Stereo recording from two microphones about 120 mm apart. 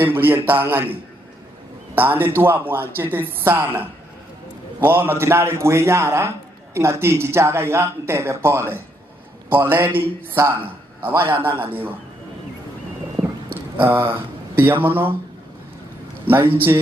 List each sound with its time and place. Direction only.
0.0 s speech: 20° right (ahead or behind)
2.0 s speech: 15° right (ahead or behind)
13.8 s speech: 20° right (ahead or behind)